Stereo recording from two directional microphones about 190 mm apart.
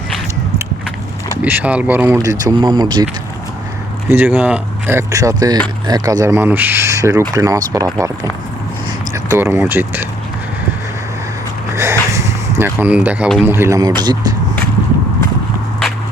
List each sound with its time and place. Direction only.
1.4 s speech: 10° right (ahead or behind)
4.1 s speech: 10° right (ahead or behind)
11.7 s a sound: 15° right (ahead or behind)
13.4 s speech: 10° right (ahead or behind)